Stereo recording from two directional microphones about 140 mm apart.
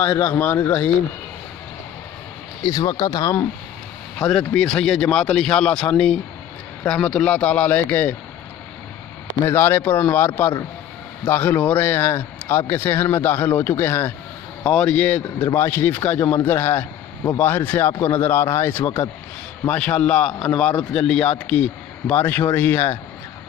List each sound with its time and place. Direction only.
0.0 s a man's voice: 15° left (ahead or behind)
2.6 s speech: 30° left (ahead or behind)
4.2 s a man's voice: 5° left (ahead or behind)
9.5 s a man's voice: 15° left (ahead or behind)